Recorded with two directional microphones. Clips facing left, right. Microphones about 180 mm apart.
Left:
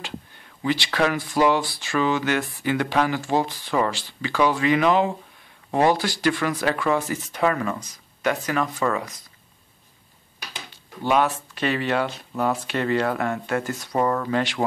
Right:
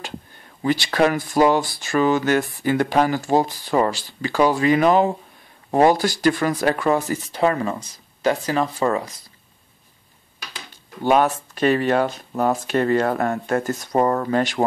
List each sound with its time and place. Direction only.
0.6 s speech: 40° right (ahead or behind)
10.7 s speech: 45° right (ahead or behind)